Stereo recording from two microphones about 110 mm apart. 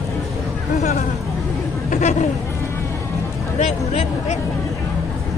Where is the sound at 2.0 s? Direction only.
90° left.